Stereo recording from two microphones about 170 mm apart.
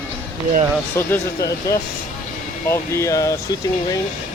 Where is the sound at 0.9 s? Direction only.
15° left (ahead or behind).